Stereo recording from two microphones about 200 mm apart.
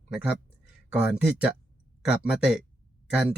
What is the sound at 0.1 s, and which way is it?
Speech, 5° right (ahead or behind).